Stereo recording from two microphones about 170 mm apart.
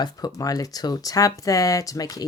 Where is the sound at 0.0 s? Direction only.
20° left (ahead or behind).